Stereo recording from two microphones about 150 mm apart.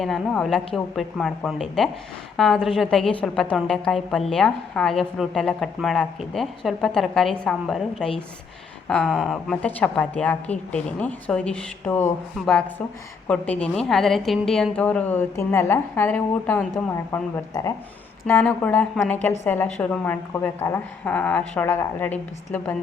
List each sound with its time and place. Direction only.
0.0 s a woman's voice: centre (ahead or behind)
13.2 s a woman's voice: 10° left (ahead or behind)
17.1 s speech: 20° left (ahead or behind)
18.3 s a woman's voice: 10° left (ahead or behind)